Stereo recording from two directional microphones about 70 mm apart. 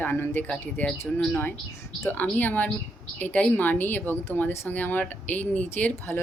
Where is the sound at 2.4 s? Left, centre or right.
Left.